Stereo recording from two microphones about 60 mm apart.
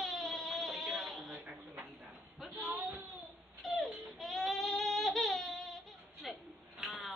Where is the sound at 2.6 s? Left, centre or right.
Right.